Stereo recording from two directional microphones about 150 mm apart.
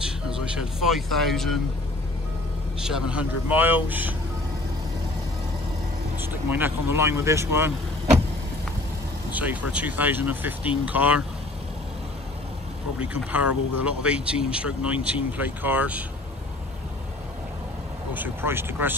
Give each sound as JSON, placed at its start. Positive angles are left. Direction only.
{"t": 0.0, "sound": "speech", "side_deg": -5}
{"t": 2.8, "sound": "speech", "side_deg": -5}
{"t": 6.1, "sound": "speech", "side_deg": -15}
{"t": 9.3, "sound": "speech", "side_deg": -10}
{"t": 13.1, "sound": "speech", "side_deg": -10}
{"t": 18.1, "sound": "speech", "side_deg": -15}